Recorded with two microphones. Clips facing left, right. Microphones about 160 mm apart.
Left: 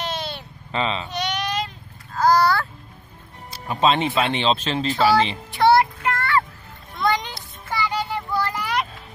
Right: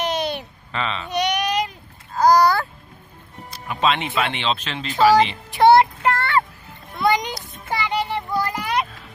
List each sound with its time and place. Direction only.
0.0 s a sound: 15° right (ahead or behind)
0.7 s speech: 30° left (ahead or behind)
1.1 s baby cry: 15° right (ahead or behind)
2.1 s babbling: 15° right (ahead or behind)
3.5 s speech: 35° left (ahead or behind)
5.6 s child singing: 20° right (ahead or behind)
6.0 s a sound: 30° right (ahead or behind)
6.9 s music: 10° right (ahead or behind)
7.6 s a sound: 20° right (ahead or behind)